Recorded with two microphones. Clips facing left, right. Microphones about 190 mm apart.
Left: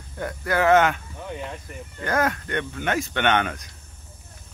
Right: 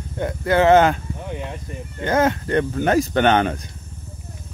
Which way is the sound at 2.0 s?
25° right (ahead or behind).